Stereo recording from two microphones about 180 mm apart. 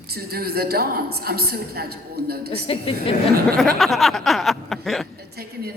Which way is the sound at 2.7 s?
30° left (ahead or behind).